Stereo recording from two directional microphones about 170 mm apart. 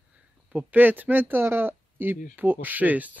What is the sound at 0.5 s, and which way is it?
Speech, 10° right (ahead or behind).